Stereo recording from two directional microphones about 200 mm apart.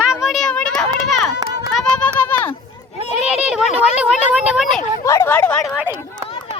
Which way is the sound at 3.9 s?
5° right (ahead or behind).